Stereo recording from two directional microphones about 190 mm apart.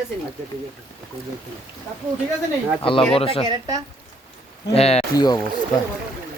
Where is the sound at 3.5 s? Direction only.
20° right (ahead or behind).